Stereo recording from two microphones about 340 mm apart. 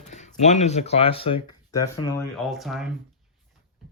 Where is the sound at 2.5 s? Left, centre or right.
Centre.